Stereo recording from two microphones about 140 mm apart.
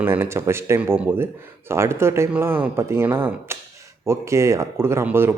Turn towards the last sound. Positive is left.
turn(degrees=-15)  # may be behind; listen again after turning